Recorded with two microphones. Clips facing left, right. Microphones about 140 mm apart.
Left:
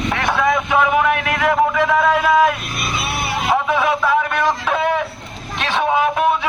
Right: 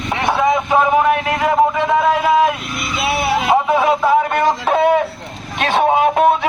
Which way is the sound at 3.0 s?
90° right.